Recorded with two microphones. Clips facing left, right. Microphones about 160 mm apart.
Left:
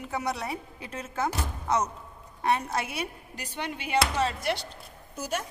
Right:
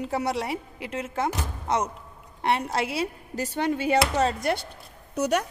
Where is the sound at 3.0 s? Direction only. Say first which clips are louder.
Right 7 dB; 40° right (ahead or behind).